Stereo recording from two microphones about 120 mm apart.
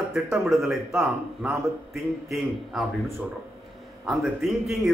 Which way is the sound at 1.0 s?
10° right (ahead or behind).